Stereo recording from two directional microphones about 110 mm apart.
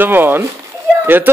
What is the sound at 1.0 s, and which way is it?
Speech, 20° right (ahead or behind).